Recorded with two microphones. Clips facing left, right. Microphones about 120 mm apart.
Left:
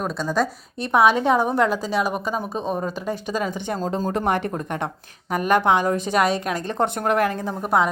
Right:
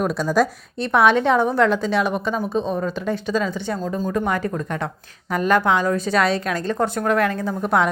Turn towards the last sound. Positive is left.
turn(degrees=5)  # may be behind; listen again after turning